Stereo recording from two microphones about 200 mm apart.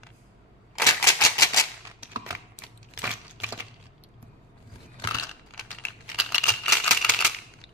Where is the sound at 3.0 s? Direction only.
10° right (ahead or behind).